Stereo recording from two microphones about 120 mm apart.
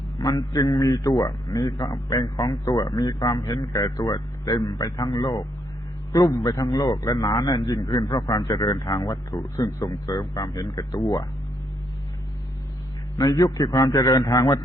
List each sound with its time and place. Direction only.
0.2 s a man's voice: 30° left (ahead or behind)
13.1 s a man's voice: 35° left (ahead or behind)